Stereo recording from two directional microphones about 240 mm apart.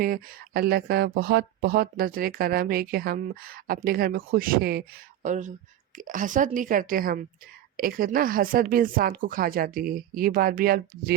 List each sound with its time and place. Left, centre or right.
0.0 s speech: right